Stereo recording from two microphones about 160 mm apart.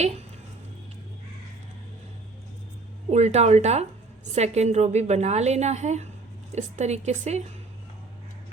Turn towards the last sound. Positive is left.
turn(degrees=-45)  # may be behind; listen again after turning